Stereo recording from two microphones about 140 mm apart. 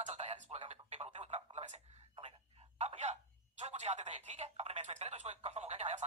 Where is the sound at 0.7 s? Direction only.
50° right (ahead or behind).